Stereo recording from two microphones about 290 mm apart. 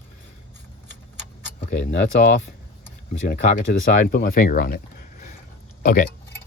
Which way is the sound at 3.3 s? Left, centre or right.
Left.